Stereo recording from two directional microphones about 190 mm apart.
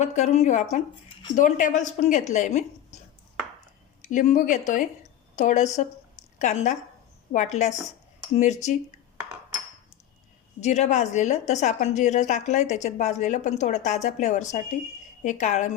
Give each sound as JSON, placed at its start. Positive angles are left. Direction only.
{"t": 0.0, "sound": "a woman's voice", "side_deg": 35}
{"t": 4.0, "sound": "a woman's voice", "side_deg": 40}
{"t": 10.6, "sound": "a woman's voice", "side_deg": 40}